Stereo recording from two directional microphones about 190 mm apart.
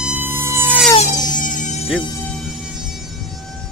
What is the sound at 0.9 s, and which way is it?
Music, 40° left (ahead or behind).